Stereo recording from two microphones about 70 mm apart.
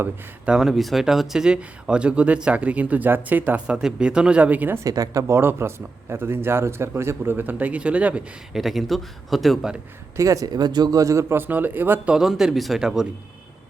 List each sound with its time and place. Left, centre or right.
0.4 s speech: centre; by 3.6 s right
3.7 s speech: centre
4.8 s speech: right
5.3 s a man's voice: right; by 8.2 s centre
8.5 s speech: centre
10.2 s speech: right
10.5 s speech: right
11.0 s speech: right
12.0 s speech: centre